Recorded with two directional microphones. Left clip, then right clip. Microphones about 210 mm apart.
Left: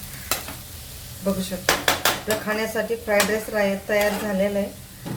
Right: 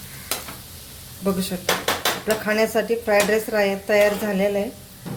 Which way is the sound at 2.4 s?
50° right (ahead or behind).